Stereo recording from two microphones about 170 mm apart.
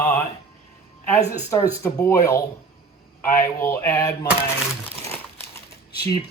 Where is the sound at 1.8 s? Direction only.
15° left (ahead or behind).